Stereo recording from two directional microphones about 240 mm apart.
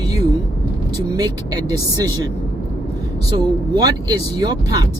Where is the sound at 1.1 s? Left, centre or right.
Centre.